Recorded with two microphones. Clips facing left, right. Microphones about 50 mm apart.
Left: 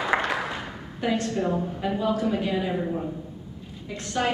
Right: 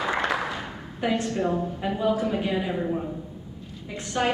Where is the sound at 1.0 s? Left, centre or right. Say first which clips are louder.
Even; centre.